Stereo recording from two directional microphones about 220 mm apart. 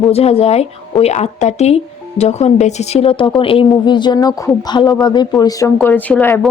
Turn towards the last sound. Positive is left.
turn(degrees=10)  # may be behind; listen again after turning